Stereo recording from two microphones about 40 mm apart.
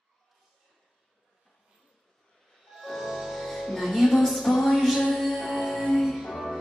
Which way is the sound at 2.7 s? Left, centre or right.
Centre.